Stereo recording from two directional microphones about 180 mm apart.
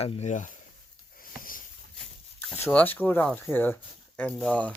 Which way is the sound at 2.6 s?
10° left (ahead or behind).